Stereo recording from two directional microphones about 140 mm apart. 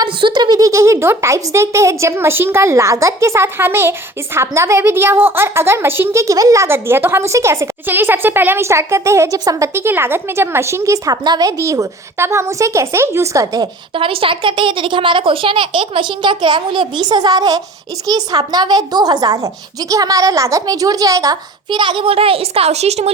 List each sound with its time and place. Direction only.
0.0 s a woman's voice: 35° right (ahead or behind)
13.9 s a child's voice: 40° right (ahead or behind)